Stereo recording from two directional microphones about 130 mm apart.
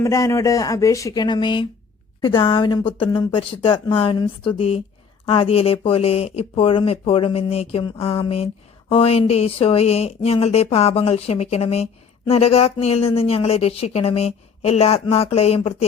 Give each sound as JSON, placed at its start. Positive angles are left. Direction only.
{"t": 0.0, "sound": "a woman's voice", "side_deg": 25}